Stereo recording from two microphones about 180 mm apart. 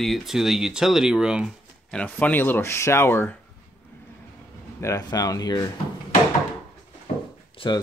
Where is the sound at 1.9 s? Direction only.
10° left (ahead or behind).